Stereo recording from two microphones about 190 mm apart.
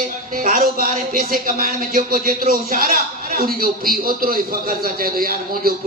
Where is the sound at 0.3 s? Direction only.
45° right (ahead or behind).